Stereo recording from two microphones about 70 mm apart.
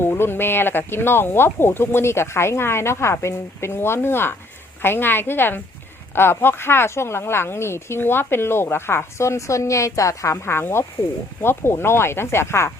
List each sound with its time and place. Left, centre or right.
0.0 s speech: left